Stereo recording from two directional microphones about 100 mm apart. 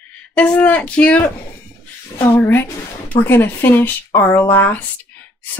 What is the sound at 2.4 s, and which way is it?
Speech, 25° left (ahead or behind).